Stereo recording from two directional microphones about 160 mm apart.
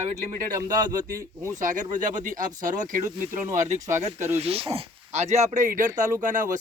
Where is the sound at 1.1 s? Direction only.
20° right (ahead or behind).